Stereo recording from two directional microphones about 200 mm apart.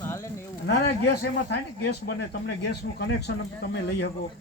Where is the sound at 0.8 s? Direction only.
55° left (ahead or behind).